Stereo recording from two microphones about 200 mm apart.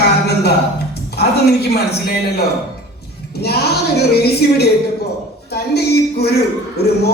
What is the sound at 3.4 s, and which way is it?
A woman's voice, 55° left (ahead or behind).